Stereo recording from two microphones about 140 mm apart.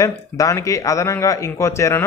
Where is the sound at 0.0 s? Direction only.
20° left (ahead or behind).